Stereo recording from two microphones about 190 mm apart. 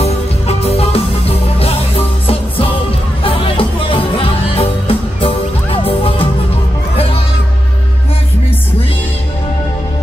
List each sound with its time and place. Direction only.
0.0 s music: 30° left (ahead or behind)